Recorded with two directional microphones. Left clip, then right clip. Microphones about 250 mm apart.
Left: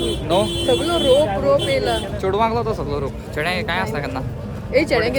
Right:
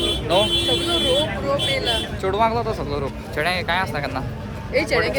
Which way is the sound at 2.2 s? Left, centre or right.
Centre.